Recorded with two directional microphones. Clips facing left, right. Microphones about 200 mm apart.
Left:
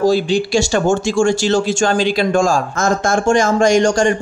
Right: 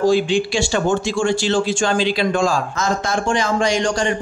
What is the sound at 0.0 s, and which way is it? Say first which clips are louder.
Speech: left 1 dB; 40° left (ahead or behind).